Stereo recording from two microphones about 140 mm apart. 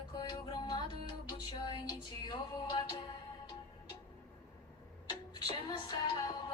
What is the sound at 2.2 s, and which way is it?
Music, 30° left (ahead or behind).